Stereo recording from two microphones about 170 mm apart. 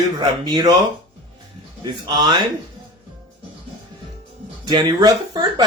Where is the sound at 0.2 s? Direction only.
25° right (ahead or behind).